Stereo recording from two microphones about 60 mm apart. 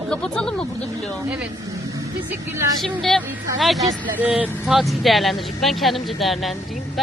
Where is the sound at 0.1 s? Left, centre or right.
Centre.